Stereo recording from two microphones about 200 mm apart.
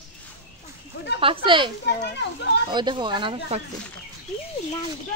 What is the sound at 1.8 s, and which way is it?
Speech, 60° left (ahead or behind).